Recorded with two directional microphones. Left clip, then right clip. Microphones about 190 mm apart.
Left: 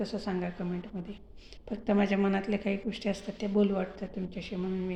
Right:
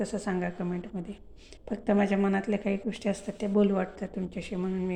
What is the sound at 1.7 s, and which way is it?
A woman's voice, 10° right (ahead or behind).